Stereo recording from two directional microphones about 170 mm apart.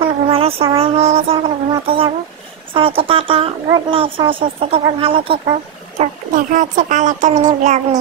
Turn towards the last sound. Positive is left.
turn(degrees=-45)  # may be behind; listen again after turning